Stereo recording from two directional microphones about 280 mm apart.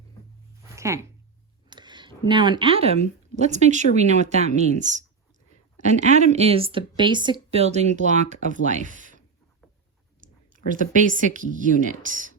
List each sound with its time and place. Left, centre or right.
0.8 s a woman's voice: centre; by 12.3 s right